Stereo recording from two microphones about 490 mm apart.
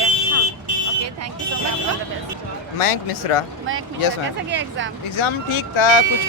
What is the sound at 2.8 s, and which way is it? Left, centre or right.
Speech, left.